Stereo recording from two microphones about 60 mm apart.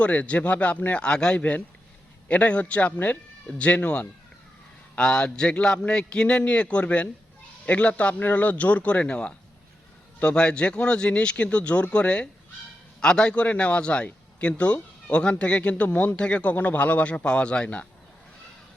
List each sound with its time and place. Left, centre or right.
0.0 s a man's voice: left